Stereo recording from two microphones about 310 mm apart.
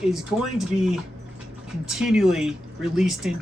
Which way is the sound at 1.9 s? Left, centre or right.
Centre.